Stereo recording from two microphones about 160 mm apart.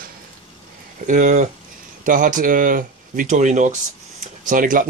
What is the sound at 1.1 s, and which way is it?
Speech, 55° right (ahead or behind).